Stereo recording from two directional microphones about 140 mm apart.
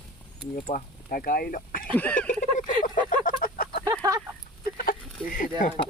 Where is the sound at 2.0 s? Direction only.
10° left (ahead or behind).